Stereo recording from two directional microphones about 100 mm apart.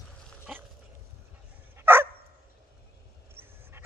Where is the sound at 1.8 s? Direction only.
20° right (ahead or behind).